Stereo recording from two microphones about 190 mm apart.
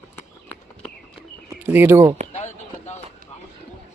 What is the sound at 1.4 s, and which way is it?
Bird, 10° right (ahead or behind).